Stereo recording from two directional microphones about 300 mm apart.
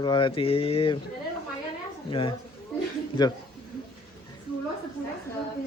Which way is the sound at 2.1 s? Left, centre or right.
Centre.